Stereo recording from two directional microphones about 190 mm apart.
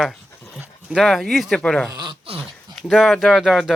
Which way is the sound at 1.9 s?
20° right (ahead or behind).